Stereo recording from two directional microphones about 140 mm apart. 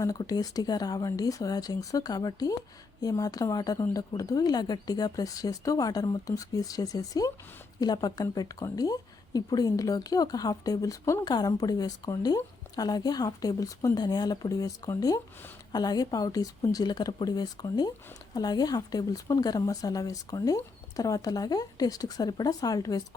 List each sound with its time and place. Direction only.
0.0 s speech: 25° left (ahead or behind)